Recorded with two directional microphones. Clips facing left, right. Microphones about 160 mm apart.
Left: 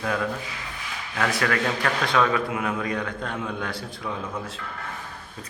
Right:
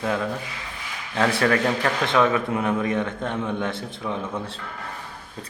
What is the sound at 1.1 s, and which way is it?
A man's voice, 30° right (ahead or behind).